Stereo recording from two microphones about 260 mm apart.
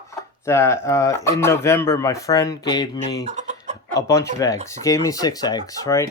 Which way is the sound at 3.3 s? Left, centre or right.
Right.